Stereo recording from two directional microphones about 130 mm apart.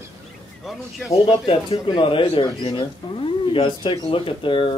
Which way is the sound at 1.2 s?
40° left (ahead or behind).